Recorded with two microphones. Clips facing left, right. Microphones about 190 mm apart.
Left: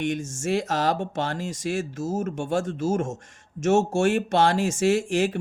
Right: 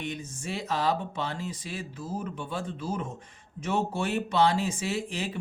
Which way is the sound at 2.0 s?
45° left (ahead or behind).